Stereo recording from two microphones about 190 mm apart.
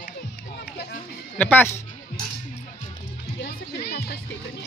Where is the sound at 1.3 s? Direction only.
10° left (ahead or behind).